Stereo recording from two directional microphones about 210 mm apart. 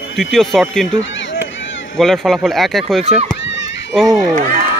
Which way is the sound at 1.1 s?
65° left (ahead or behind).